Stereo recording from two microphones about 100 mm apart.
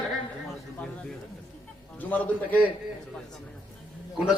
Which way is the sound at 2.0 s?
15° left (ahead or behind).